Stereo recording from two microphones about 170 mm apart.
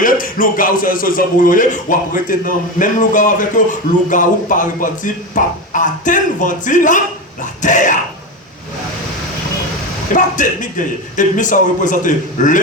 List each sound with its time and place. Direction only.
0.0 s speech: 55° left (ahead or behind)
10.2 s speech: 50° left (ahead or behind)